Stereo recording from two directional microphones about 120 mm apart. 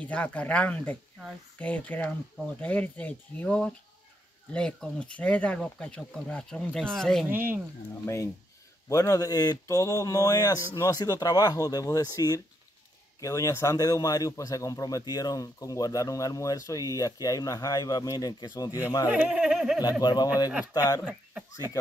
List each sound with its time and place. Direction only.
0.0 s speech: 15° left (ahead or behind)
7.2 s speech: 15° right (ahead or behind)
8.0 s a man's voice: 25° left (ahead or behind)
19.0 s speech: 10° right (ahead or behind)
20.0 s a man's voice: 35° left (ahead or behind)
21.1 s speech: 10° right (ahead or behind)